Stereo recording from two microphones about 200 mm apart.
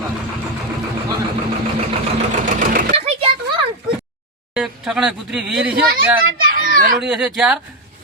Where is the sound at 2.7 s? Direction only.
45° right (ahead or behind).